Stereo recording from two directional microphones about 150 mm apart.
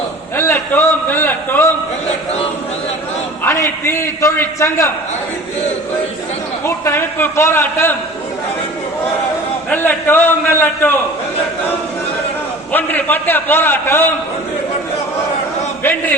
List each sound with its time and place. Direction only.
0.3 s a man's voice: 15° left (ahead or behind)
3.4 s a man's voice: 15° left (ahead or behind)
6.7 s a man's voice: 15° left (ahead or behind)
9.6 s a man's voice: 10° left (ahead or behind)
12.7 s a man's voice: 10° left (ahead or behind)
15.8 s a man's voice: 15° left (ahead or behind)